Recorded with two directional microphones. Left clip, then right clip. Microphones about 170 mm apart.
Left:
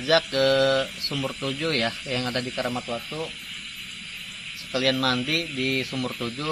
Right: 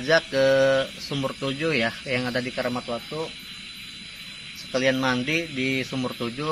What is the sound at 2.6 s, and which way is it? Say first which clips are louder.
Speech: right 1 dB; 10° right (ahead or behind).